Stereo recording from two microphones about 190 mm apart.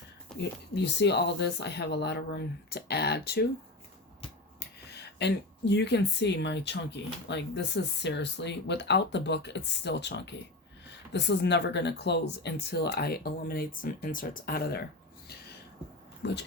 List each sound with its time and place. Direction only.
0.3 s whispering: centre (ahead or behind)
0.7 s speech: 65° left (ahead or behind)
4.9 s speech: 60° left (ahead or behind)
16.2 s speech: 65° left (ahead or behind)